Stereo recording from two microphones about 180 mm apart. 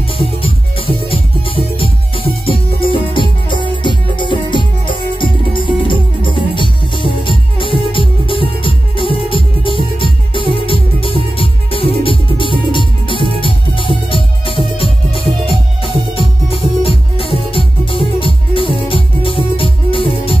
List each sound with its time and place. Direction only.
0.2 s music: 30° left (ahead or behind)
15.8 s music: 30° right (ahead or behind)
16.8 s music: 30° left (ahead or behind)